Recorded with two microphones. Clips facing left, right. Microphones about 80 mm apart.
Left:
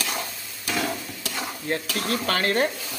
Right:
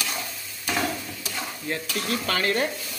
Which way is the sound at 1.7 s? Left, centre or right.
Left.